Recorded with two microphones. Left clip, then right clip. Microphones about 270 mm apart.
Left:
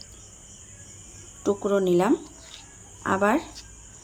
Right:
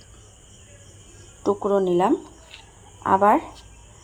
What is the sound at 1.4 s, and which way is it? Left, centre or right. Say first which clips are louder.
Speech: right 3 dB; centre.